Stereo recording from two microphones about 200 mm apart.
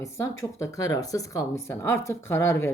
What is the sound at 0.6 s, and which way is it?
Speech, 15° left (ahead or behind).